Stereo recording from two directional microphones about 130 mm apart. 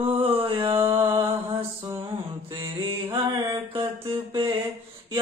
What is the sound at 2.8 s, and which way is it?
Mantra, 35° right (ahead or behind).